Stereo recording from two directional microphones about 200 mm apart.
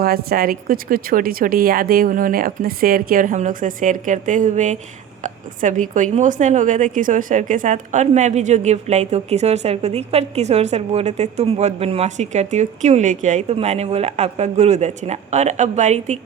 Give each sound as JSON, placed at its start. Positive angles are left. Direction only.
{"t": 0.0, "sound": "a woman's voice", "side_deg": -50}